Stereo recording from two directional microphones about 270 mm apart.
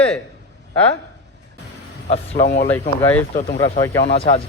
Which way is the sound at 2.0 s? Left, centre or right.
Left.